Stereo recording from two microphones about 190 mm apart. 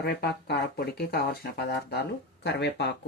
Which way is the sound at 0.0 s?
55° left (ahead or behind).